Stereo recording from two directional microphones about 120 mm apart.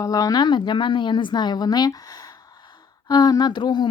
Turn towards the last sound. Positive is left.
turn(degrees=40)  # may be behind; listen again after turning